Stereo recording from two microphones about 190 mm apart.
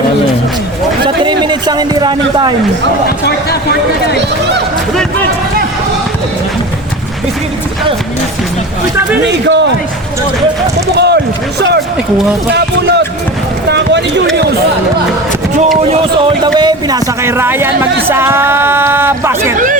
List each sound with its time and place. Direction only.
1.0 s speech: 25° right (ahead or behind)
3.2 s speech: 55° left (ahead or behind)
9.2 s speech: 70° right (ahead or behind)
10.9 s a sound: 60° right (ahead or behind)
12.5 s speech: 60° right (ahead or behind)
13.7 s a sound: 65° right (ahead or behind)
15.8 s speech: 30° right (ahead or behind); by 19.5 s 15° right (ahead or behind)
19.5 s speech: 45° right (ahead or behind)